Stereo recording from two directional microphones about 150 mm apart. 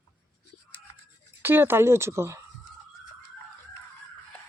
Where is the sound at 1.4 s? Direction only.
15° right (ahead or behind).